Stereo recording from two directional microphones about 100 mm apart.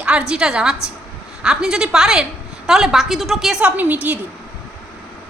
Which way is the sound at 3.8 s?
15° right (ahead or behind).